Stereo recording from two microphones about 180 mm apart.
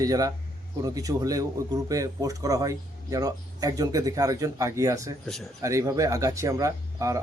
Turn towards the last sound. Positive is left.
turn(degrees=-15)  # may be behind; listen again after turning